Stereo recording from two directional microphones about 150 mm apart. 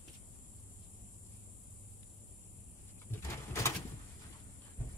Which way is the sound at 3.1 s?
20° left (ahead or behind).